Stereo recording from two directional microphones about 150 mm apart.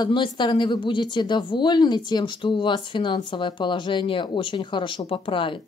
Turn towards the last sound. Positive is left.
turn(degrees=35)  # may be behind; listen again after turning